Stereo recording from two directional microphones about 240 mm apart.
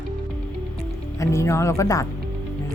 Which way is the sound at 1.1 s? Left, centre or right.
Centre.